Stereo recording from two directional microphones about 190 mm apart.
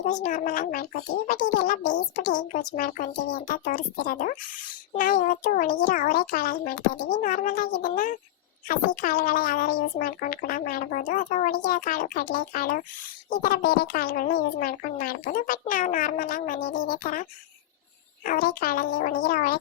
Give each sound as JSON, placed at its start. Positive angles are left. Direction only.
{"t": 0.0, "sound": "a woman's voice", "side_deg": 40}